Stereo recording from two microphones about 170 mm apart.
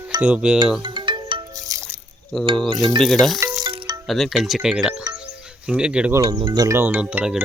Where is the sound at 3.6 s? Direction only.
25° right (ahead or behind).